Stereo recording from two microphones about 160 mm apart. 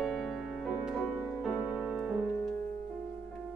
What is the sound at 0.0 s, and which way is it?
Music, centre (ahead or behind).